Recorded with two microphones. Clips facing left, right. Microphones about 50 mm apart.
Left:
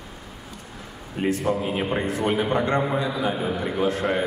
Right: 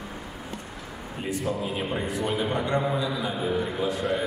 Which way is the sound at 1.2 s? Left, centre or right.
Left.